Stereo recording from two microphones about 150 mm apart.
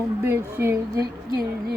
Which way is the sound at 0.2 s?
15° right (ahead or behind).